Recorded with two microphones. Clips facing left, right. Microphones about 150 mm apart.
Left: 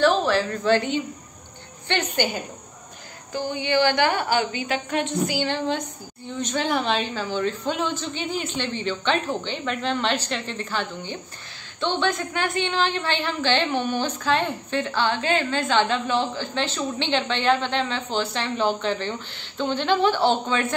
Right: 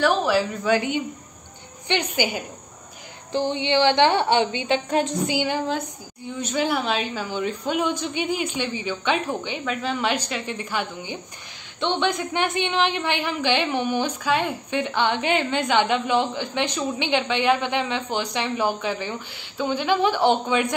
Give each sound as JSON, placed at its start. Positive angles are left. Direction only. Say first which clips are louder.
{"t": 0.0, "sound": "a woman's voice", "louder": "even", "side_deg": -10}
{"t": 3.3, "sound": "a woman's voice", "louder": "right 2 dB", "side_deg": -25}
{"t": 4.8, "sound": "a woman's voice", "louder": "right 3 dB", "side_deg": -35}
{"t": 5.2, "sound": "a woman's voice", "louder": "right 1 dB", "side_deg": -15}